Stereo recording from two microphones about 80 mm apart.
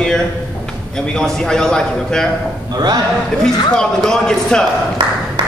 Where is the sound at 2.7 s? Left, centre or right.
Right.